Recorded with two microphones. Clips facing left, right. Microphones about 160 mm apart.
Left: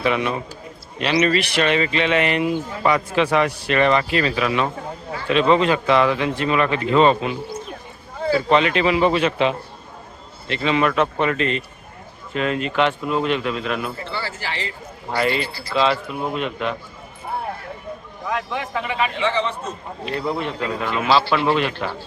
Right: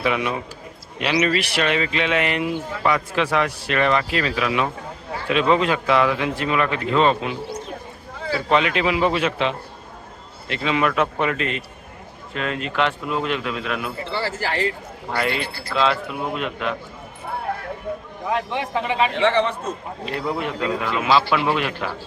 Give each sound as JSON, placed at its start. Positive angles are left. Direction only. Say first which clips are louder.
{"t": 0.0, "sound": "a man's voice", "louder": "left 1 dB", "side_deg": -5}
{"t": 8.4, "sound": "speech", "louder": "even", "side_deg": -5}
{"t": 10.5, "sound": "speech", "louder": "left 2 dB", "side_deg": -5}
{"t": 14.0, "sound": "a man's voice", "louder": "right 3 dB", "side_deg": -30}
{"t": 14.3, "sound": "a man's voice", "louder": "right 6 dB", "side_deg": -45}
{"t": 15.7, "sound": "speech", "louder": "left 1 dB", "side_deg": 0}
{"t": 18.3, "sound": "a man's voice", "louder": "right 2 dB", "side_deg": -30}
{"t": 19.1, "sound": "a man's voice", "louder": "right 3 dB", "side_deg": -60}
{"t": 20.1, "sound": "a man's voice", "louder": "left 1 dB", "side_deg": -5}